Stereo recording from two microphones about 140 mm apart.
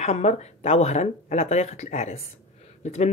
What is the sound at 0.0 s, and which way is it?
Speech, 50° left (ahead or behind).